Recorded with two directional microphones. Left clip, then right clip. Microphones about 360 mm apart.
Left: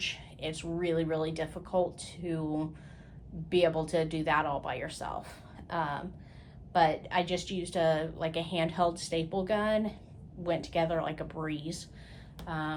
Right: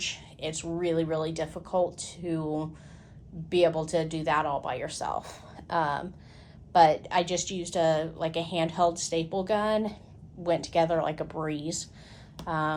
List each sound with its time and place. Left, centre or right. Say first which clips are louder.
0.0 s a woman's voice: right 2 dB; centre